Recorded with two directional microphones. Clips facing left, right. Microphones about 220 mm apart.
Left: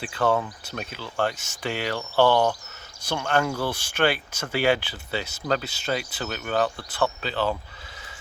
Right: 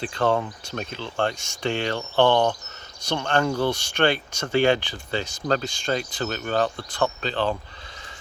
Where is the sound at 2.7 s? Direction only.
5° left (ahead or behind).